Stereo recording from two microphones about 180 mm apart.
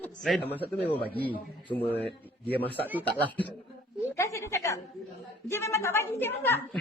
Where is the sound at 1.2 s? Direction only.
10° left (ahead or behind).